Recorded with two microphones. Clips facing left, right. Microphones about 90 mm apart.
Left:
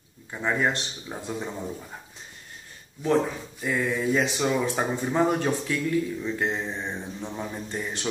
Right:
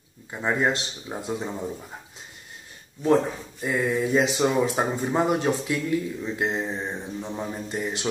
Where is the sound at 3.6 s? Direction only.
20° right (ahead or behind).